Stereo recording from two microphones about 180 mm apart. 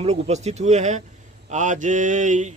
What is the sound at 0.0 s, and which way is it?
Speech, 40° right (ahead or behind).